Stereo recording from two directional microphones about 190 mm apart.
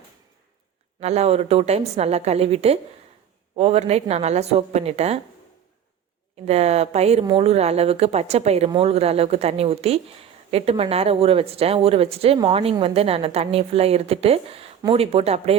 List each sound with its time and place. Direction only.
0.9 s speech: 35° right (ahead or behind)
6.4 s speech: 35° right (ahead or behind)